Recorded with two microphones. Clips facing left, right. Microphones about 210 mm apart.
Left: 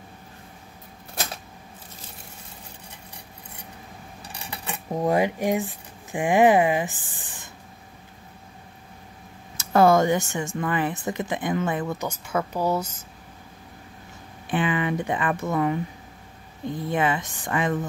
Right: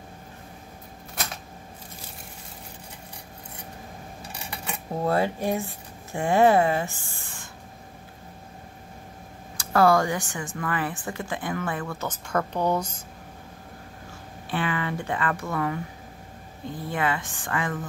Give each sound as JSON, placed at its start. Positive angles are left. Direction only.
{"t": 4.9, "sound": "speech", "side_deg": 15}
{"t": 9.6, "sound": "speech", "side_deg": 20}
{"t": 14.5, "sound": "speech", "side_deg": 20}